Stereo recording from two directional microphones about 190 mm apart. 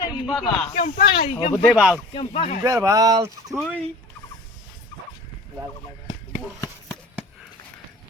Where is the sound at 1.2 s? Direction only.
30° left (ahead or behind).